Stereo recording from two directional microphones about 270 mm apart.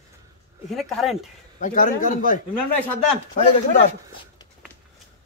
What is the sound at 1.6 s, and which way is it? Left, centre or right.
Speech, left.